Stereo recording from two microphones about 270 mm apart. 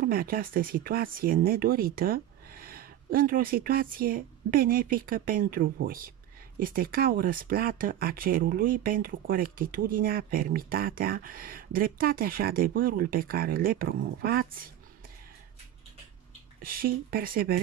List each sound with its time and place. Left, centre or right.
0.0 s speech: right
16.6 s speech: right